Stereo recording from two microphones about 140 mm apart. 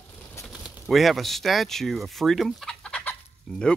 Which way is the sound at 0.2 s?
20° left (ahead or behind).